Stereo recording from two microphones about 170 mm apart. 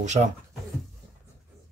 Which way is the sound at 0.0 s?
45° right (ahead or behind).